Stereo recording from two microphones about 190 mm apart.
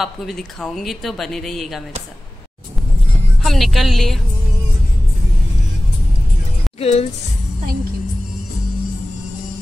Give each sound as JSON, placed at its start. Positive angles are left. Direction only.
{"t": 0.0, "sound": "speech", "side_deg": 0}
{"t": 3.4, "sound": "speech", "side_deg": 0}
{"t": 6.8, "sound": "a woman's voice", "side_deg": 30}